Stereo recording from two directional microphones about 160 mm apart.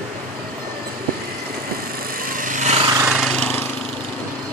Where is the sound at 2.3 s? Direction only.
55° right (ahead or behind).